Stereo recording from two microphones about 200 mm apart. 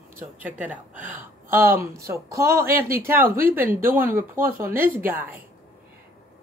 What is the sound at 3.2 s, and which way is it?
Speech, 45° right (ahead or behind).